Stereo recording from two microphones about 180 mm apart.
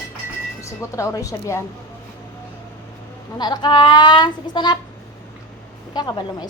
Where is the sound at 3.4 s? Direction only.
25° left (ahead or behind).